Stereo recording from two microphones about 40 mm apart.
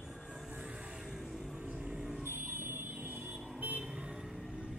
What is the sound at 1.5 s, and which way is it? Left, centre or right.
Vehicle, right.